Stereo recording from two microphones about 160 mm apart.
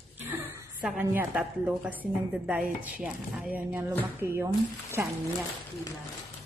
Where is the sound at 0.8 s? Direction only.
10° right (ahead or behind).